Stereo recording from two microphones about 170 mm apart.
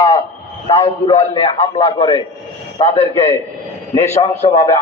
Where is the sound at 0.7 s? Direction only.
20° left (ahead or behind).